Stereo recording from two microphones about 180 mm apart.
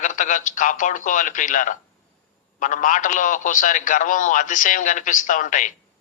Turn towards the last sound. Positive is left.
turn(degrees=45)  # may be behind; listen again after turning